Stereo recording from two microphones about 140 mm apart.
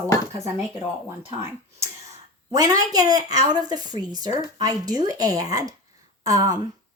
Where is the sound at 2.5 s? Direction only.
25° right (ahead or behind).